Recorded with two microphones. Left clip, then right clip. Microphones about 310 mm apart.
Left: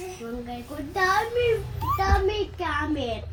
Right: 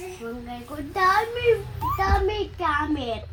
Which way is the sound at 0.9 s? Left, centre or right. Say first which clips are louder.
Right 2 dB; centre.